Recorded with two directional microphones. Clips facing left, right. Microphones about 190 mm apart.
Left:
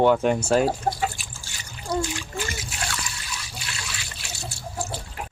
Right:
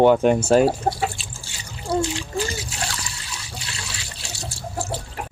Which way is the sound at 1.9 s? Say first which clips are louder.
Right 4 dB; 30° right (ahead or behind).